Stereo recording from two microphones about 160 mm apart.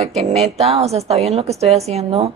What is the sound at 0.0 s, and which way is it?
A woman's voice, 40° right (ahead or behind).